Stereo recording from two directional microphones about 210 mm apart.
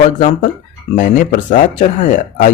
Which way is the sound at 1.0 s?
40° left (ahead or behind).